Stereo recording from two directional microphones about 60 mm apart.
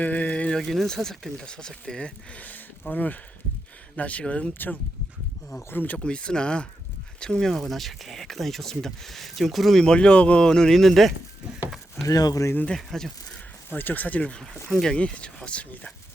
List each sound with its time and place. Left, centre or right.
0.0 s a sound: left
0.5 s speech: centre
2.4 s speech: left
4.5 s speech: left
6.0 s speech: centre
9.8 s speech: centre
12.0 s speech: left
12.7 s speech: centre
13.7 s speech: left; by 15.6 s centre